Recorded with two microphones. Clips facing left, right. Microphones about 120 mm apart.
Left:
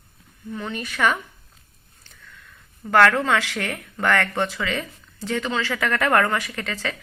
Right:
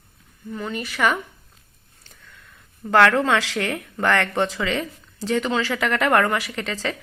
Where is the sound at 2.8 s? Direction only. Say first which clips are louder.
Right 1 dB; 20° right (ahead or behind).